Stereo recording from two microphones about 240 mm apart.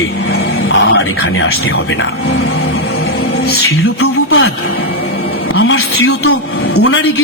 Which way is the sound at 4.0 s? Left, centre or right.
Left.